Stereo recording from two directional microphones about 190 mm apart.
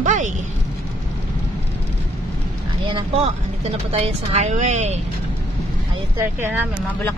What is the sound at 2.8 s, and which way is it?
Speech, 30° right (ahead or behind).